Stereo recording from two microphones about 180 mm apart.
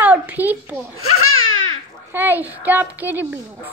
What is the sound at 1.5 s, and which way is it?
Babbling, 90° left.